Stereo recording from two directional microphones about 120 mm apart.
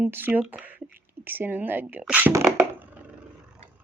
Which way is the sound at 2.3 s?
20° right (ahead or behind).